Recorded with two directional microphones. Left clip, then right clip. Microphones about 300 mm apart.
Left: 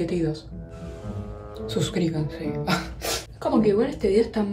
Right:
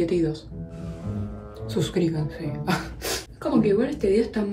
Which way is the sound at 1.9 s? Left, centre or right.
Left.